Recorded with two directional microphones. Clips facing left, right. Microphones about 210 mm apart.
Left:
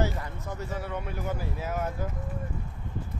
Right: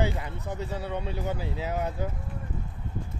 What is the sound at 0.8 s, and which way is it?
Speech, 20° right (ahead or behind).